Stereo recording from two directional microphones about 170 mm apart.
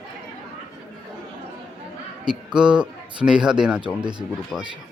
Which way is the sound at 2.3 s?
5° right (ahead or behind).